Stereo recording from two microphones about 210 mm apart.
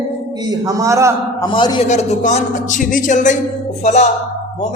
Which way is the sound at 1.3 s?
20° left (ahead or behind).